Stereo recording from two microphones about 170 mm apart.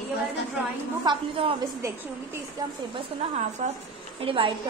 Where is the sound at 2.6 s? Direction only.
20° right (ahead or behind).